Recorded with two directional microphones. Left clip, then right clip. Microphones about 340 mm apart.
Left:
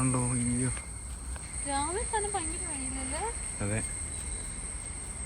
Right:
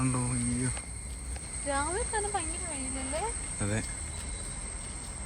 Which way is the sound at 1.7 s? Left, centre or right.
Centre.